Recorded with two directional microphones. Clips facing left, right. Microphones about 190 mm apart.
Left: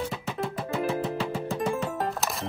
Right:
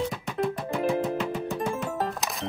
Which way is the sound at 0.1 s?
5° left (ahead or behind).